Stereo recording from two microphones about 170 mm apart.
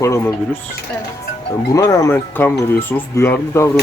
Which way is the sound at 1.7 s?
15° left (ahead or behind).